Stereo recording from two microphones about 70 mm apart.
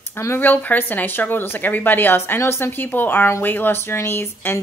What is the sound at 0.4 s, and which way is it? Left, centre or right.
A woman's voice, left.